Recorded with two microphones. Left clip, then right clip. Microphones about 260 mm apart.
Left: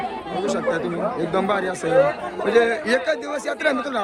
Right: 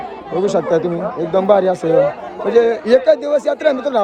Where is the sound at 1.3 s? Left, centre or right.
Centre.